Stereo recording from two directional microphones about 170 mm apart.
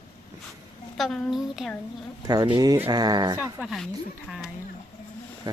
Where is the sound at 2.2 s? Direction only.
25° right (ahead or behind).